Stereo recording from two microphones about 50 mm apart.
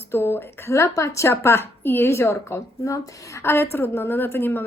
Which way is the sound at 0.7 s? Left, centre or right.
Left.